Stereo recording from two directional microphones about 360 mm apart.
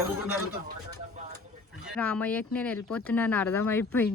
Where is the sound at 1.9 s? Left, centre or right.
Centre.